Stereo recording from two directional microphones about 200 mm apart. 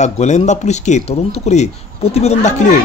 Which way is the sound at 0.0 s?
35° left (ahead or behind).